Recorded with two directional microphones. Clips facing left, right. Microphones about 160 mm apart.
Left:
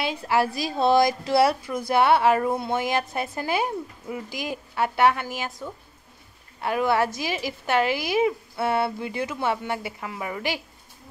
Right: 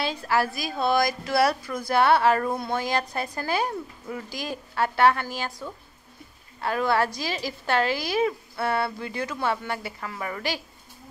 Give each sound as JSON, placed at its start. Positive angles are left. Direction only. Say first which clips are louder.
{"t": 0.0, "sound": "a woman's voice", "louder": "left 2 dB", "side_deg": 20}